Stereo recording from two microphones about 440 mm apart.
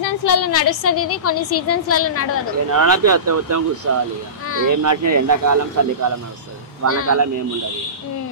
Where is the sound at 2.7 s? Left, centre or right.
Right.